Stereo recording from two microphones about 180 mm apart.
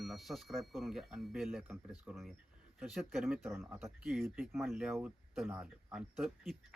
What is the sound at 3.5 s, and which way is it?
Speech, 15° right (ahead or behind).